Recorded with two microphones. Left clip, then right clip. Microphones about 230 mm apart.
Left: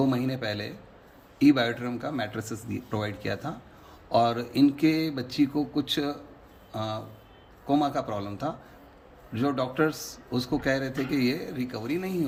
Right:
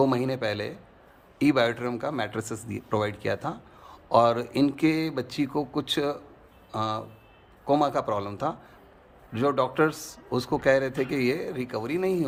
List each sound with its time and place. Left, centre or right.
0.0 s speech: centre